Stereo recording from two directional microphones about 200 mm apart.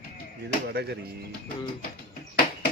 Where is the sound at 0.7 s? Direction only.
55° right (ahead or behind).